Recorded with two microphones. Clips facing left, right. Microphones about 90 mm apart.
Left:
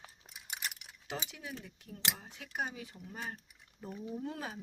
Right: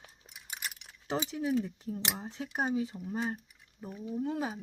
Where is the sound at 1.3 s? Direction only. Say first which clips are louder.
Right 15 dB; 35° right (ahead or behind); by 3.4 s 20° right (ahead or behind).